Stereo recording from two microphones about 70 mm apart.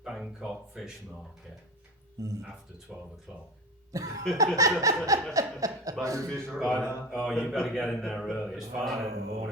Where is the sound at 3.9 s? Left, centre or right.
Right.